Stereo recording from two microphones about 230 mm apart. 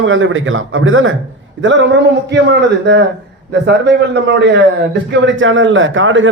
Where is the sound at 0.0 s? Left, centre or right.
Right.